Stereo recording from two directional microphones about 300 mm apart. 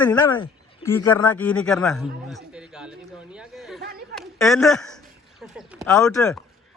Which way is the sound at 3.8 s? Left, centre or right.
Right.